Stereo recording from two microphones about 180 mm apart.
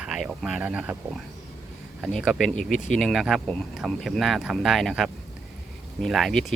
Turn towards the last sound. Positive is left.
turn(degrees=0)  # may be behind; listen again after turning